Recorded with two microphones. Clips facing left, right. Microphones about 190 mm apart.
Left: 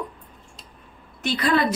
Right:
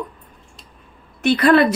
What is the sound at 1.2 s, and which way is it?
Speech, 65° right (ahead or behind).